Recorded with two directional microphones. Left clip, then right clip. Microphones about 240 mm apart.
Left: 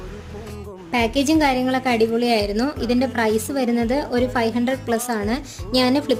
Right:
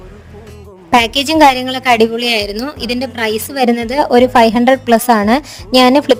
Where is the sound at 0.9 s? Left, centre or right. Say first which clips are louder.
Right 8 dB; right.